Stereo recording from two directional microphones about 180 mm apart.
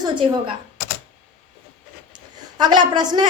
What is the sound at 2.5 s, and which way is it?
Speech, 25° right (ahead or behind).